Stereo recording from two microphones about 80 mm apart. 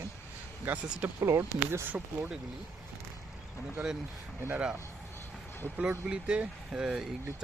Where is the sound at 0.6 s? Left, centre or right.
Centre.